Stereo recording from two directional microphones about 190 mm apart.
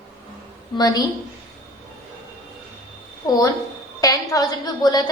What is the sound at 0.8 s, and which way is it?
Speech, 20° left (ahead or behind).